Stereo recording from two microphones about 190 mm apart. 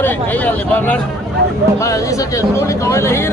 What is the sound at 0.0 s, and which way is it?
Speech, 10° left (ahead or behind).